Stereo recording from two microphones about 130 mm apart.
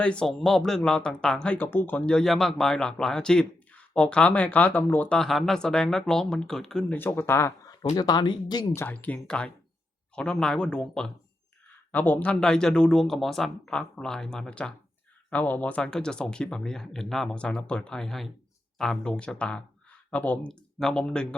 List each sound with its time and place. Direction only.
0.0 s speech: 5° left (ahead or behind)
7.0 s speech: 15° left (ahead or behind); by 8.6 s 35° left (ahead or behind)
8.7 s speech: 15° left (ahead or behind)